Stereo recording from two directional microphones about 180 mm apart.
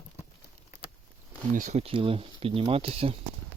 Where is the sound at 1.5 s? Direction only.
45° right (ahead or behind).